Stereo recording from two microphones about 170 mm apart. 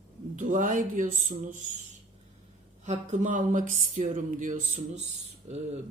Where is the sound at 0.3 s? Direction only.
50° right (ahead or behind).